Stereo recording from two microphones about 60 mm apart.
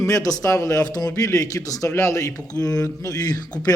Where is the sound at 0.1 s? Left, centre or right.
Left.